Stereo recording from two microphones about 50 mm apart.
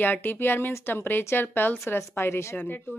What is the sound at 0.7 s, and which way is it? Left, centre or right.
Speech, left.